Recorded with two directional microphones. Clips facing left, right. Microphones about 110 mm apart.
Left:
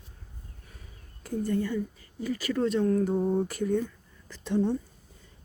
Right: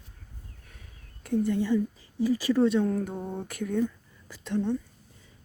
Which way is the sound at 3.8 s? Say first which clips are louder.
Right 8 dB; 10° right (ahead or behind).